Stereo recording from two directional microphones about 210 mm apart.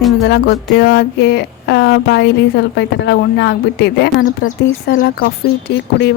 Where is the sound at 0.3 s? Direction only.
50° left (ahead or behind).